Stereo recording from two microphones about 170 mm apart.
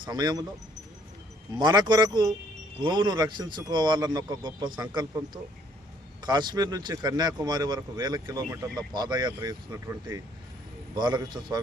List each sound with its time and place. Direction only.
0.0 s speech: 25° right (ahead or behind)
1.5 s speech: 25° right (ahead or behind)